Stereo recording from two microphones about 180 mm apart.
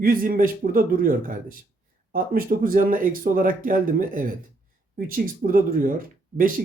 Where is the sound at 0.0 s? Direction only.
50° right (ahead or behind).